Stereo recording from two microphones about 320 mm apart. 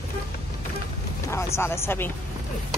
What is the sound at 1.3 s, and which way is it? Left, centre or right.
Speech, centre.